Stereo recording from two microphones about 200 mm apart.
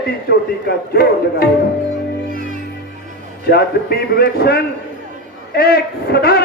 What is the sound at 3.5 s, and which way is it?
A man's voice, 50° left (ahead or behind).